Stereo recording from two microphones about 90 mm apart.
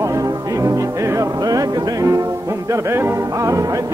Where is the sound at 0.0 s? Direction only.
40° right (ahead or behind).